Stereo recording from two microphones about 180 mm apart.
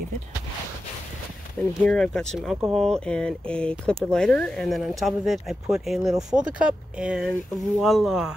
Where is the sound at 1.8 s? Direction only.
5° left (ahead or behind).